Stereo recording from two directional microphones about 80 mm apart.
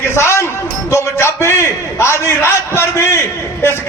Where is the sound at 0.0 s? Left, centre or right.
Left.